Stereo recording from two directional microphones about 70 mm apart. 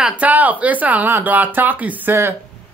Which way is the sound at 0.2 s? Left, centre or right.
Right.